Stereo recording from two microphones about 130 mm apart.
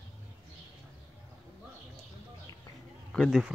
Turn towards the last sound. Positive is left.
turn(degrees=5)  # may be behind; listen again after turning